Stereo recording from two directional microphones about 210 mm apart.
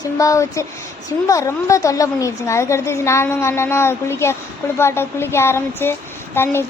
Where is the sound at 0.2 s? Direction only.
15° left (ahead or behind).